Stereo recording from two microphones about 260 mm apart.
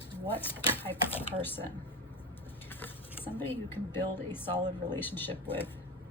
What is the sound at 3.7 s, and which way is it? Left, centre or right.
A woman's voice, centre.